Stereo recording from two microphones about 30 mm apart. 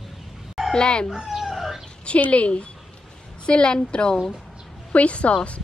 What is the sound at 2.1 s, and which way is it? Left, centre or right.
Speech, left.